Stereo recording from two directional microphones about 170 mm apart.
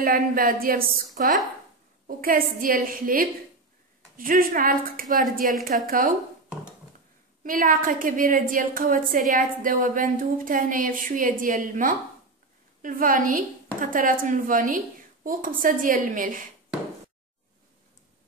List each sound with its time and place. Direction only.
0.0 s a woman's voice: 55° right (ahead or behind)
7.4 s a woman's voice: 55° right (ahead or behind)